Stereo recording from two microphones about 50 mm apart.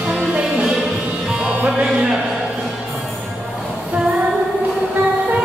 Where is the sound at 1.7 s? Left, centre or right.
Right.